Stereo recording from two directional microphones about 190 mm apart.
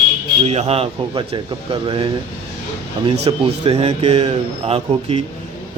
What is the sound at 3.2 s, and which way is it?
A man's voice, 30° right (ahead or behind).